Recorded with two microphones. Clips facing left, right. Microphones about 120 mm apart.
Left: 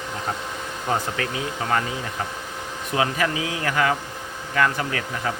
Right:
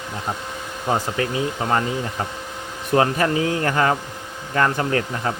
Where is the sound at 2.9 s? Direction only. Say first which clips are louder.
Right 5 dB; 40° right (ahead or behind).